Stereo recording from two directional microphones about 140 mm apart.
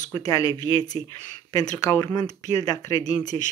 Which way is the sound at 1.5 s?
25° left (ahead or behind).